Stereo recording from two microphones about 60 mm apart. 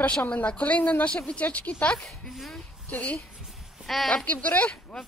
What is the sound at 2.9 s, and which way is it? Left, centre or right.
Speech, left.